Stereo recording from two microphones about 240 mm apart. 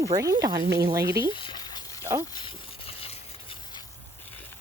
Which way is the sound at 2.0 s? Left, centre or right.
Centre.